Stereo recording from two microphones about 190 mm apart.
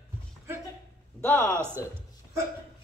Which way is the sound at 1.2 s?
15° left (ahead or behind).